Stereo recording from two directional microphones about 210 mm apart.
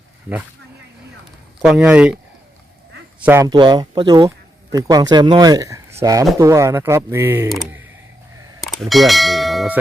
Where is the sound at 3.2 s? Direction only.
10° right (ahead or behind).